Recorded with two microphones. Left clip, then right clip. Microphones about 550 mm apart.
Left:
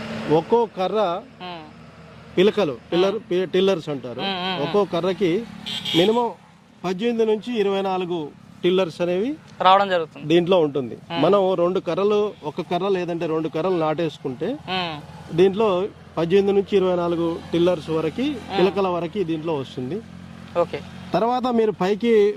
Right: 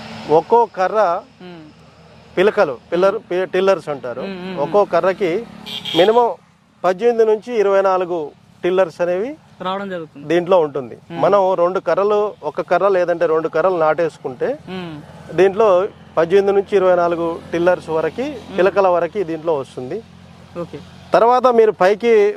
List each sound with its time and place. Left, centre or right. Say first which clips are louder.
0.3 s speech: right 6 dB; right
1.4 s speech: left 4 dB; left
2.3 s speech: right 4 dB; right
4.2 s speech: left 1 dB; left
4.7 s speech: right 9 dB; right
6.8 s speech: right 8 dB; right
8.6 s speech: right 4 dB; right
9.6 s speech: left 8 dB; left
10.2 s speech: right 4 dB; right
14.7 s speech: left 5 dB; left
15.4 s speech: right 6 dB; right
21.1 s speech: right 9 dB; right